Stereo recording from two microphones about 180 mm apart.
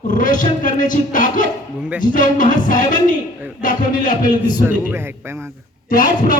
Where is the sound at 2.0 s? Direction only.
50° left (ahead or behind).